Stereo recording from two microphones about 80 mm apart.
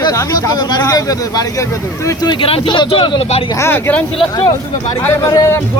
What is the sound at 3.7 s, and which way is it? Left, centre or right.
Speech, left.